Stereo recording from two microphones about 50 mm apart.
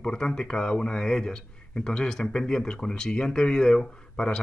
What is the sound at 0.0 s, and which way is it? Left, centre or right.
Speech, centre.